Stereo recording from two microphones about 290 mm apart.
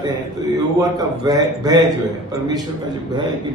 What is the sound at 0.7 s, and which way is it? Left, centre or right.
A man's voice, centre.